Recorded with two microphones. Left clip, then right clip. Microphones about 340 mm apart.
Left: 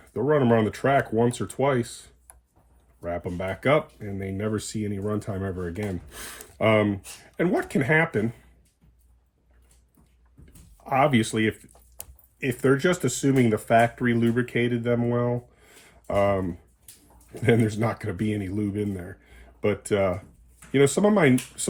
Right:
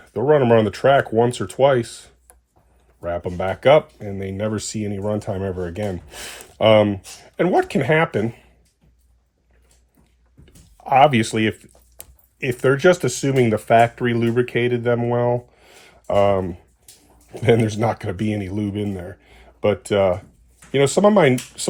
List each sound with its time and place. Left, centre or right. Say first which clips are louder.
0.1 s speech: right 7 dB; centre
10.8 s speech: right 8 dB; centre
16.0 s speech: right 6 dB; right